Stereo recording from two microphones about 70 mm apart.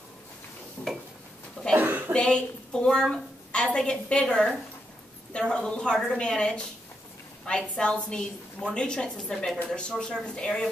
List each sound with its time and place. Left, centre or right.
0.8 s dishes: left
1.8 s a sound: right
2.1 s a woman's voice: centre